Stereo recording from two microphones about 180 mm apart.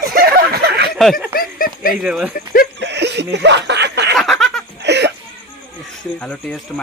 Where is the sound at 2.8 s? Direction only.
70° right (ahead or behind).